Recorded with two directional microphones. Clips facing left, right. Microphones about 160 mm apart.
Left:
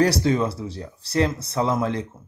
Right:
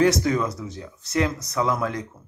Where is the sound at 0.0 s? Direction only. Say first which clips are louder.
Even; 30° left (ahead or behind).